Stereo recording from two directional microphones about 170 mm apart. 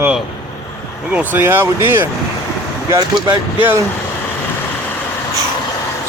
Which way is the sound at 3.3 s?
10° right (ahead or behind).